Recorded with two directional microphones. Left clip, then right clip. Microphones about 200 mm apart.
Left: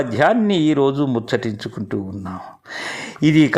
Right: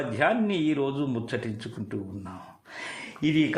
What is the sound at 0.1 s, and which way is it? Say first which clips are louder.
Speech: left 8 dB; 30° left (ahead or behind).